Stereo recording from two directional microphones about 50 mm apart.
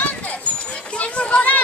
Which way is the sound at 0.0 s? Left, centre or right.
Left.